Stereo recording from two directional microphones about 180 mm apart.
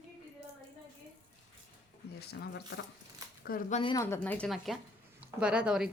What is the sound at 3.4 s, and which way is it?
Speech, 50° left (ahead or behind).